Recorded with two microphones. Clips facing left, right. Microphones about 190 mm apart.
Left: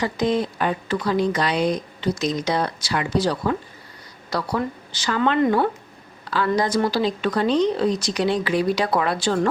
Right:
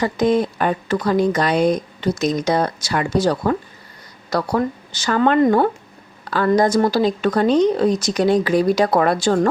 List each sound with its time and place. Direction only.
0.0 s a woman's voice: 50° right (ahead or behind)